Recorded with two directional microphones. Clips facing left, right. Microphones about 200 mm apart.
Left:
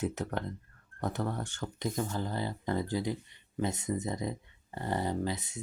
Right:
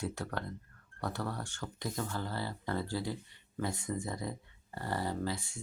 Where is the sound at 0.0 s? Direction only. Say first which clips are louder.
Left 4 dB; 20° left (ahead or behind).